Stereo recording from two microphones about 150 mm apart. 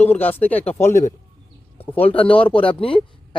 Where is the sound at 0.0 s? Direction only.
10° left (ahead or behind).